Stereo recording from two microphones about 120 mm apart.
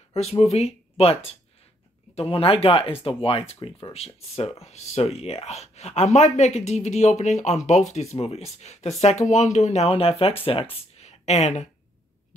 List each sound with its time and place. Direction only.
0.1 s speech: 60° left (ahead or behind)